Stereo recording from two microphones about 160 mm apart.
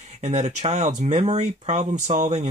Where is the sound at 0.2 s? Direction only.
45° right (ahead or behind).